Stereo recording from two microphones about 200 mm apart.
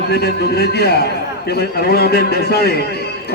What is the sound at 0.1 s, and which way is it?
A man's voice, 55° left (ahead or behind).